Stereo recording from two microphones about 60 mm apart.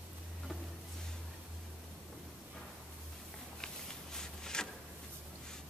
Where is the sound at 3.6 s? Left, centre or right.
Centre.